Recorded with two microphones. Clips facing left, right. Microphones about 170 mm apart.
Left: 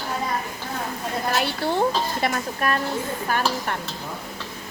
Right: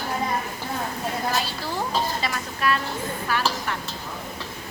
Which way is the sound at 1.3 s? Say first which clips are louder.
Left 5 dB; 60° left (ahead or behind).